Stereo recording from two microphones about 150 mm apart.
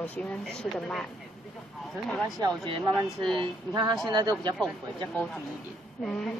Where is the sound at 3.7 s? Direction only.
30° right (ahead or behind).